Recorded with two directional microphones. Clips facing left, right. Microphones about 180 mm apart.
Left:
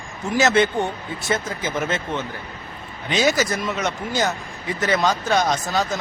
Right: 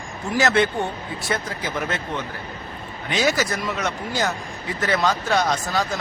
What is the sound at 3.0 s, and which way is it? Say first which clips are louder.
A man's voice: left 2 dB; 20° left (ahead or behind).